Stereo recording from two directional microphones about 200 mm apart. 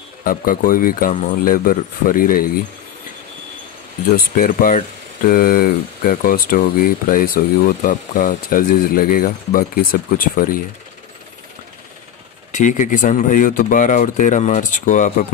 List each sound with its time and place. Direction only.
0.2 s speech: 45° left (ahead or behind)
4.4 s speech: 45° left (ahead or behind)
12.5 s speech: 40° left (ahead or behind)